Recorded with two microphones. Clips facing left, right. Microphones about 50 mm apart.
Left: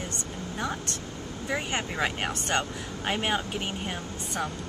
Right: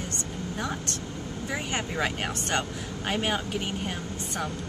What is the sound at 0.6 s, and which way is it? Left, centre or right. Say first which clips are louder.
Speech: left 1 dB; centre.